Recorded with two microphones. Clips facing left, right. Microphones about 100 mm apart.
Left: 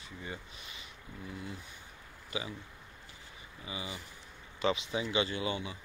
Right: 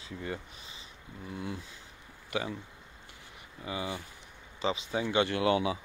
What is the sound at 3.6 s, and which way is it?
Speech, 60° right (ahead or behind).